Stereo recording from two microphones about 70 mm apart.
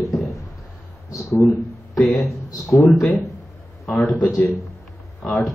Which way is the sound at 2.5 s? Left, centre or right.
Left.